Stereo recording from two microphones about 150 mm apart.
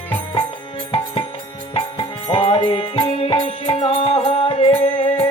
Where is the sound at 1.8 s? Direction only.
35° left (ahead or behind).